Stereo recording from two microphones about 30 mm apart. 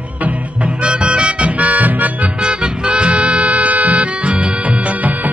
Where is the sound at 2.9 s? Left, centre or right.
Right.